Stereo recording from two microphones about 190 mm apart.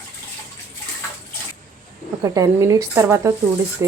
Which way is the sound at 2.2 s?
15° right (ahead or behind).